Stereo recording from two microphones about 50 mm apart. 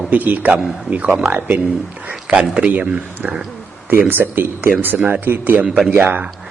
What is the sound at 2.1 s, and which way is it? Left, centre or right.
Speech, centre.